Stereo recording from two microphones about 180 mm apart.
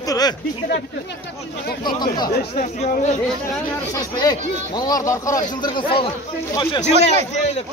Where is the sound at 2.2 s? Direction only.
40° left (ahead or behind).